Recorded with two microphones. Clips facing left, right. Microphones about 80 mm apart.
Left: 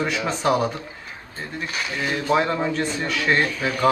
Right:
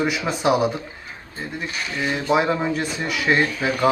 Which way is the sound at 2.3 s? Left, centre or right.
Centre.